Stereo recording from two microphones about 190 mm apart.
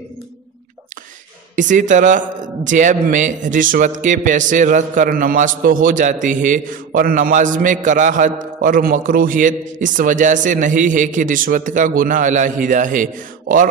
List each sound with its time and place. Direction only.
1.5 s a man's voice: 40° right (ahead or behind)